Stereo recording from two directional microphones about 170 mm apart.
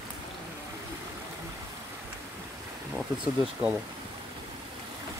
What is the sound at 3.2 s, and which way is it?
Speech, 10° right (ahead or behind).